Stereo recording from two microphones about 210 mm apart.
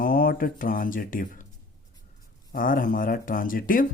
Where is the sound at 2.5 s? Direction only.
40° left (ahead or behind).